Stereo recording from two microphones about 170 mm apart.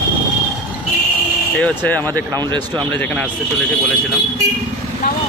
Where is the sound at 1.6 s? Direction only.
10° left (ahead or behind).